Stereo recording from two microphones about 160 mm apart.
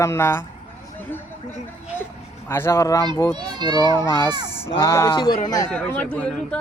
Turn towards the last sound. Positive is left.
turn(degrees=5)  # may be behind; listen again after turning